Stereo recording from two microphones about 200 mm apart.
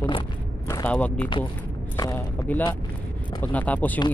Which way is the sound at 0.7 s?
15° left (ahead or behind).